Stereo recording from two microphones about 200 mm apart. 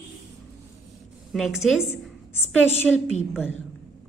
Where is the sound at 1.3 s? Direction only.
Centre (ahead or behind).